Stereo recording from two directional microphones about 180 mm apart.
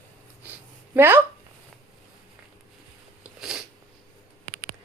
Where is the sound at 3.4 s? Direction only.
Centre (ahead or behind).